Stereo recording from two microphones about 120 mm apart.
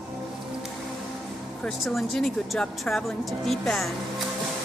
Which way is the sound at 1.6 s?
5° left (ahead or behind).